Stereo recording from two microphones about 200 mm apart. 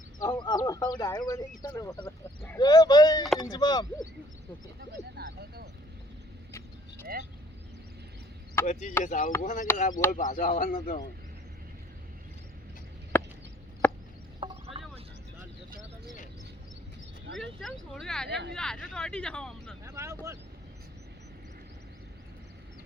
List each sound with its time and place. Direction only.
0.2 s speech: 20° left (ahead or behind)
4.8 s speech: 50° right (ahead or behind)
6.5 s vehicle: 10° left (ahead or behind)
8.6 s speech: 35° left (ahead or behind)
13.1 s a sound: 10° left (ahead or behind)
13.8 s chop: 10° left (ahead or behind)
14.4 s a sound: 25° right (ahead or behind)
17.6 s speech: centre (ahead or behind)
19.8 s speech: 15° right (ahead or behind)